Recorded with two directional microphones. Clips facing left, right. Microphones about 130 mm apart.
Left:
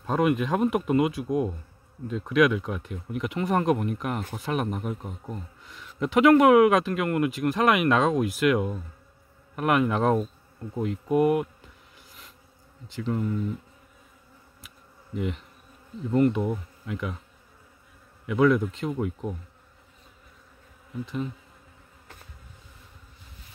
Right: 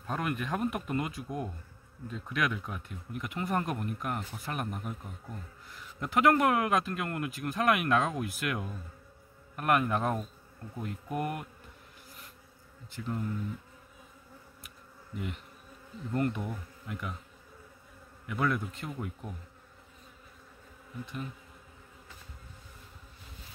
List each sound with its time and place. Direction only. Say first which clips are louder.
0.0 s speech: left 10 dB; 90° left; by 5.1 s 75° left (ahead or behind)
5.7 s speech: left 9 dB; 90° left
11.1 s speech: left 13 dB; 20° left (ahead or behind)
12.8 s speech: left 7 dB; 90° left
15.1 s speech: left 8 dB; 90° left
18.2 s speech: left 10 dB; 90° left